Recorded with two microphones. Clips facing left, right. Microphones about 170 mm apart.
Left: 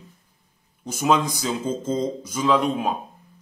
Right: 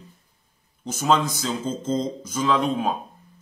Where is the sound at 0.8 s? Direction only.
10° left (ahead or behind).